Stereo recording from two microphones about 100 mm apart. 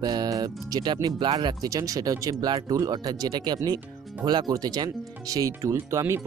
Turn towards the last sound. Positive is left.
turn(degrees=-30)  # may be behind; listen again after turning